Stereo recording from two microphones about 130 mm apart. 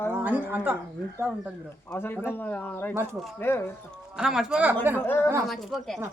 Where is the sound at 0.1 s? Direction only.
15° right (ahead or behind).